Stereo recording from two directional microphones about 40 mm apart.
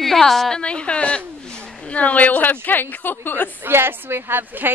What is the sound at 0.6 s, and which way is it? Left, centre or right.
A woman's voice, left.